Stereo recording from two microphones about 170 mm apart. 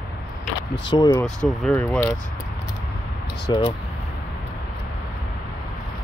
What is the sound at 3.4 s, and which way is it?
Speech, 25° left (ahead or behind).